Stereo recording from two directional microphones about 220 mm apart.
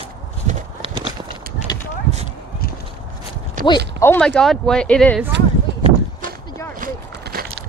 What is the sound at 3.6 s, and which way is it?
Clip-clop, 40° right (ahead or behind).